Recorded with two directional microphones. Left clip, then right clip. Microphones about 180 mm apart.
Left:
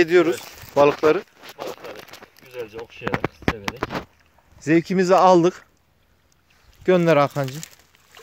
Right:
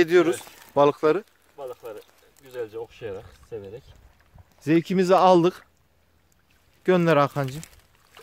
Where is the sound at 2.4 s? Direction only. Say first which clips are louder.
Left 3 dB; 45° left (ahead or behind).